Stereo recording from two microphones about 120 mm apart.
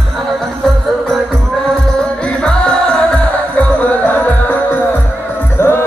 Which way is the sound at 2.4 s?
10° left (ahead or behind).